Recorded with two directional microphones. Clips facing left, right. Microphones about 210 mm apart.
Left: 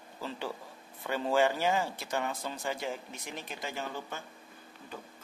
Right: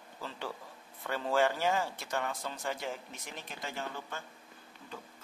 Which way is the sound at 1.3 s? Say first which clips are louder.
Left 2 dB; 5° left (ahead or behind).